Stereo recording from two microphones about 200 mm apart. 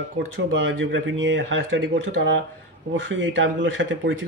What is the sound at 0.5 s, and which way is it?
Speech, 65° right (ahead or behind).